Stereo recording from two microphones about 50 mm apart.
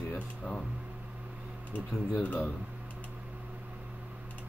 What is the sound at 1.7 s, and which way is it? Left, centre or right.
Speech, left.